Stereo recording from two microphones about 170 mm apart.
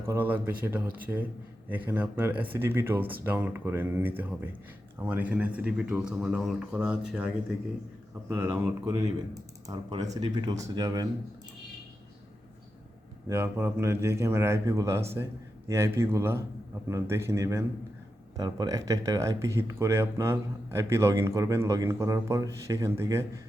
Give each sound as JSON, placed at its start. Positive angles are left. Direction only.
{"t": 0.0, "sound": "speech", "side_deg": -10}
{"t": 8.3, "sound": "speech", "side_deg": -15}
{"t": 13.2, "sound": "speech", "side_deg": -15}